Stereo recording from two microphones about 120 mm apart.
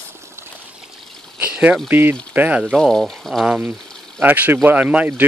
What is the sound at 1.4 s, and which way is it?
Speech, 10° right (ahead or behind).